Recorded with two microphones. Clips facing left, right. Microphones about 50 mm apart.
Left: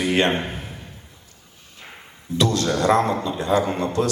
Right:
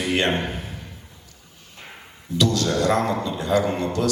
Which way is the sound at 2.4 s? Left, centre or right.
Left.